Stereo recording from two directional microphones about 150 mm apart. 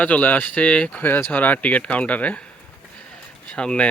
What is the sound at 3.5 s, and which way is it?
Speech, 5° left (ahead or behind).